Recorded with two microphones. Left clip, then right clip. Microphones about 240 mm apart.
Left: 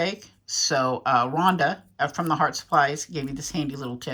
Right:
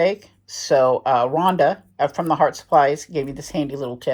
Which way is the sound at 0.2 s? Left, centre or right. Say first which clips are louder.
Left 6 dB; right.